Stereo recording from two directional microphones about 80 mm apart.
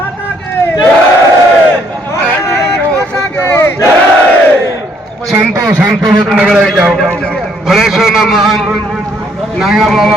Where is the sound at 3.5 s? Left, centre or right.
Left.